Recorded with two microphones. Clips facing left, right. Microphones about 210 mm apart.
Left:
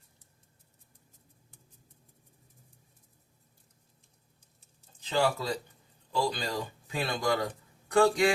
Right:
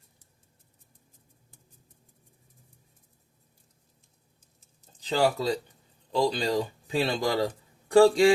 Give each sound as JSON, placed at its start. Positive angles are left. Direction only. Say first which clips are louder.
{"t": 4.9, "sound": "speech", "louder": "right 3 dB", "side_deg": -35}